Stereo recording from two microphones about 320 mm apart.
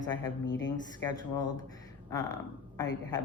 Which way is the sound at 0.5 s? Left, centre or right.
Left.